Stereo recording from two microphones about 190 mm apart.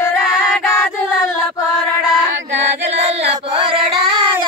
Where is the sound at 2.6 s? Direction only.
35° right (ahead or behind).